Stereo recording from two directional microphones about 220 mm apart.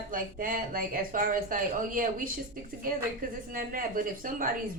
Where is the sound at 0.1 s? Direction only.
40° right (ahead or behind).